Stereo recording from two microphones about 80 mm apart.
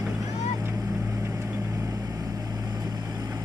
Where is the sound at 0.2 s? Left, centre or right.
Right.